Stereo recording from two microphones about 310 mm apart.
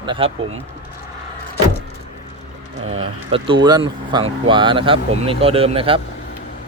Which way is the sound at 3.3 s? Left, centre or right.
Centre.